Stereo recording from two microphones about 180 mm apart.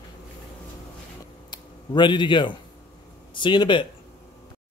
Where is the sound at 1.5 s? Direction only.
25° left (ahead or behind).